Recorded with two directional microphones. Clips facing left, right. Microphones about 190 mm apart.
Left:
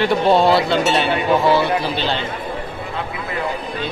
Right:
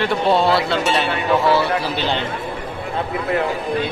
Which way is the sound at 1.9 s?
15° right (ahead or behind).